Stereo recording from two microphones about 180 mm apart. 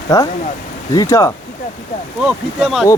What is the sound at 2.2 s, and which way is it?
Speech, centre (ahead or behind).